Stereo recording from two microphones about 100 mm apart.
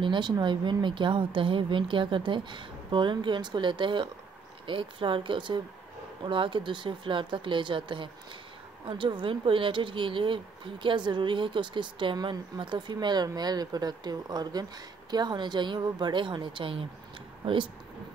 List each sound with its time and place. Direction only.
0.0 s speech: 50° right (ahead or behind)